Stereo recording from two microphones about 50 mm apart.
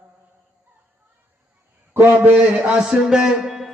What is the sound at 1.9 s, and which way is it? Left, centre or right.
Speech, right.